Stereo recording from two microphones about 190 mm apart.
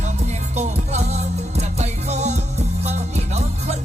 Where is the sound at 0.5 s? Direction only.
35° right (ahead or behind).